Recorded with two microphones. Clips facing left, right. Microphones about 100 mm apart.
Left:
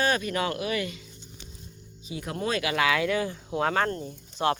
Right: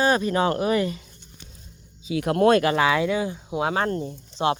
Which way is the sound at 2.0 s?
75° right (ahead or behind).